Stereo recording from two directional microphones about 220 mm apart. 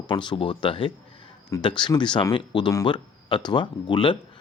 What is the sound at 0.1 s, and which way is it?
Speech, 20° left (ahead or behind).